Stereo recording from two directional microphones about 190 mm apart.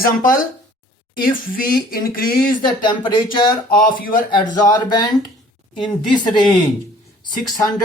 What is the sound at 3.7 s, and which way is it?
Speech, 50° left (ahead or behind).